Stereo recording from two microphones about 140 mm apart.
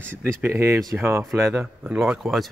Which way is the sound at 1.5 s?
5° right (ahead or behind).